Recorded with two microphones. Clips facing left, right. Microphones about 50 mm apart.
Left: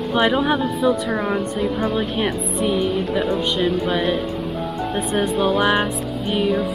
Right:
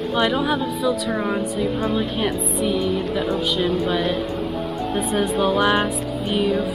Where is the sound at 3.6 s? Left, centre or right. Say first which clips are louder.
Even; centre.